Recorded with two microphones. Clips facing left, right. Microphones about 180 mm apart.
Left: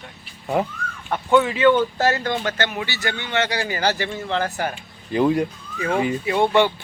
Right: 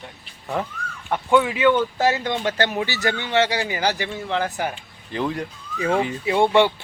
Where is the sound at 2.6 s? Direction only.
35° right (ahead or behind); by 4.7 s 15° right (ahead or behind).